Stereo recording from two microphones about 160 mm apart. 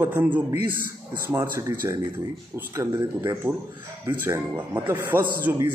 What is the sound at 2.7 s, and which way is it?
A man's voice, 20° right (ahead or behind).